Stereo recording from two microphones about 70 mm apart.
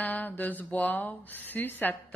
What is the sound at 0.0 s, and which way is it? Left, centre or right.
A woman's voice, left.